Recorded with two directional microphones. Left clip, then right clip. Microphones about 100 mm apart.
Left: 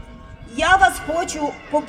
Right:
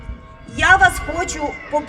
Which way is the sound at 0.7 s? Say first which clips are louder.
Right 2 dB; 50° left (ahead or behind).